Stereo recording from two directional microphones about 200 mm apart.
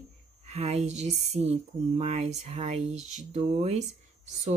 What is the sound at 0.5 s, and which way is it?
Speech, 30° right (ahead or behind).